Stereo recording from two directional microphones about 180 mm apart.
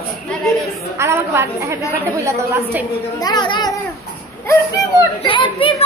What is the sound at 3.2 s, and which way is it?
Speech, 25° left (ahead or behind).